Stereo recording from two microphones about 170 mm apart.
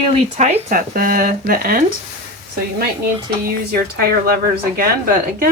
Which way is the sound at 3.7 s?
65° right (ahead or behind).